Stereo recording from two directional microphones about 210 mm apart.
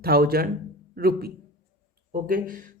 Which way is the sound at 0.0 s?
45° right (ahead or behind).